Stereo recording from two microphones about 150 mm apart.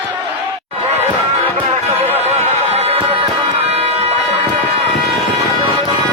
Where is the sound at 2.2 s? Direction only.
45° right (ahead or behind).